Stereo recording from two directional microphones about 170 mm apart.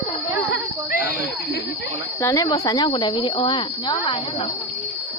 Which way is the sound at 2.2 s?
20° left (ahead or behind).